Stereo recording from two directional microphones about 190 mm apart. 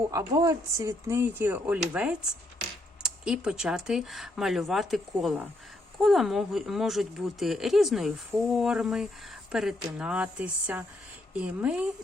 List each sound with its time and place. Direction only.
0.1 s speech: 20° right (ahead or behind)